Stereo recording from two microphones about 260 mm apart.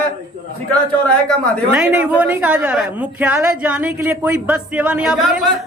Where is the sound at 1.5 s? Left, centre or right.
Centre.